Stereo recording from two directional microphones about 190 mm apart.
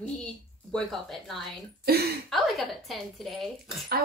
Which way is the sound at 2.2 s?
Centre (ahead or behind).